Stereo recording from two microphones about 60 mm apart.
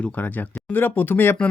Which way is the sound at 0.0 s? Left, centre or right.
Left.